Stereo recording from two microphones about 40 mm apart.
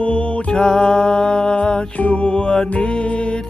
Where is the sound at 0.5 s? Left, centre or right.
Centre.